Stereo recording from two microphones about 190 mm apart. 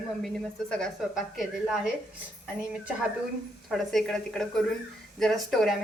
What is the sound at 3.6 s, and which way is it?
A woman's voice, centre (ahead or behind).